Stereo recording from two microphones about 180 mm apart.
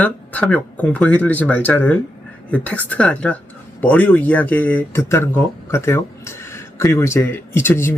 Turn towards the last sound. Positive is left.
turn(degrees=10)  # may be behind; listen again after turning